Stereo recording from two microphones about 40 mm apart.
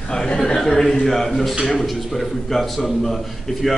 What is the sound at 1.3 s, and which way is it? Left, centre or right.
A man's voice, centre.